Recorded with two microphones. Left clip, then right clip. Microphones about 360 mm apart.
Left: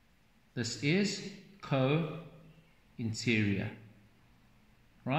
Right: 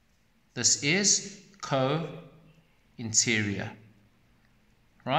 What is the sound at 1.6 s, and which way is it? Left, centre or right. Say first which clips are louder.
Speech: right 4 dB; right.